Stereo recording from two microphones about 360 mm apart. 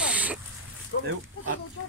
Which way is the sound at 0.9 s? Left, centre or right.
Left.